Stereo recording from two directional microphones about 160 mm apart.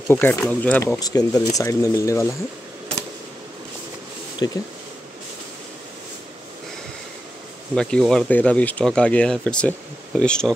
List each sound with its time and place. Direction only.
0.1 s speech: 10° left (ahead or behind)
0.9 s speech: 25° left (ahead or behind)
4.4 s speech: 20° left (ahead or behind)
7.7 s speech: 5° left (ahead or behind)